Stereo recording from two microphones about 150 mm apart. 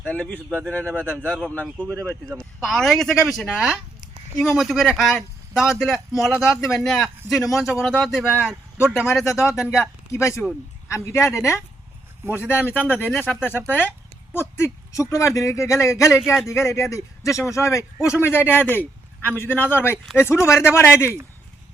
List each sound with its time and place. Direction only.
0.0 s a man's voice: 10° left (ahead or behind)
10.1 s a man's voice: 20° left (ahead or behind)